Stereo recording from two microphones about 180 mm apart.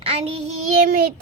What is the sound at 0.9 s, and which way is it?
Child singing, 55° right (ahead or behind).